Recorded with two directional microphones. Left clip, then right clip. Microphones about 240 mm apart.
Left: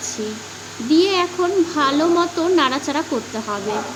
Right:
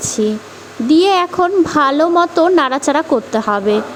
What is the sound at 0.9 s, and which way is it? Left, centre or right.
Speech, right.